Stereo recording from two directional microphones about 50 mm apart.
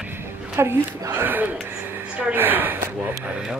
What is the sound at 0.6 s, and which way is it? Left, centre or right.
Speech, right.